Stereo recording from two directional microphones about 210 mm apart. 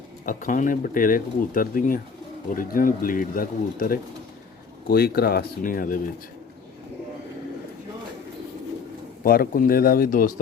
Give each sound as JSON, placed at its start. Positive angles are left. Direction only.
{"t": 0.3, "sound": "speech", "side_deg": 40}
{"t": 9.2, "sound": "speech", "side_deg": 45}